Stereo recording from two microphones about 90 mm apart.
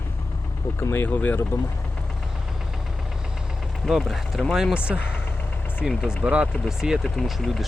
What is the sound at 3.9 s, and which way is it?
Speech, 5° right (ahead or behind).